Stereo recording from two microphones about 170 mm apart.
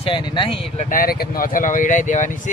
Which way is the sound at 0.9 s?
60° left (ahead or behind).